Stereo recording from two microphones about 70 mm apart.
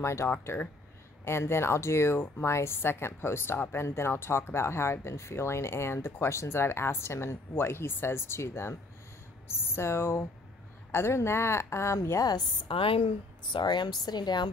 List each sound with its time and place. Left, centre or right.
0.0 s speech: left
0.3 s speech: left
1.2 s speech: left
12.2 s a woman's voice: left
13.7 s a woman's voice: left